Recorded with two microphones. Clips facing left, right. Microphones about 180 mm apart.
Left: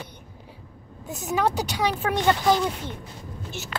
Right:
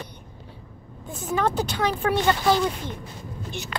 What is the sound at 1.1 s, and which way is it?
Speech, 10° left (ahead or behind).